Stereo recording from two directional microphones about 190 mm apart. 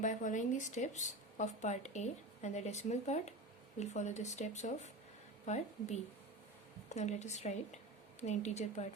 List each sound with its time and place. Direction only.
0.0 s speech: 40° left (ahead or behind)